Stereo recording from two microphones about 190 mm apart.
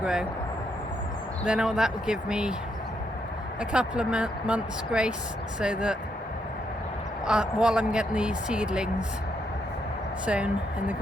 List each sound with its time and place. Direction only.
0.0 s speech: 5° right (ahead or behind)
1.5 s speech: 5° right (ahead or behind)
3.6 s speech: 5° right (ahead or behind)
7.3 s speech: 5° right (ahead or behind)
10.2 s speech: 5° right (ahead or behind)